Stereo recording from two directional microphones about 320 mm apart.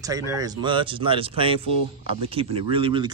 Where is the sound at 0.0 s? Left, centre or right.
Centre.